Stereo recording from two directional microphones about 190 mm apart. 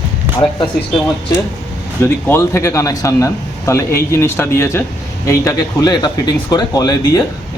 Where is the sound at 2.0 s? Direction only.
10° left (ahead or behind).